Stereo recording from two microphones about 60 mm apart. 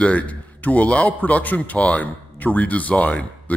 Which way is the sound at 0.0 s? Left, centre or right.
Left.